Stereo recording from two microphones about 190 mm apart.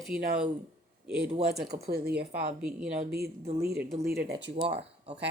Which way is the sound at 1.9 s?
55° right (ahead or behind).